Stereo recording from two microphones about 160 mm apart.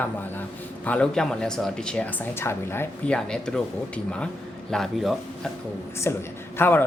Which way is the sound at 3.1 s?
5° left (ahead or behind).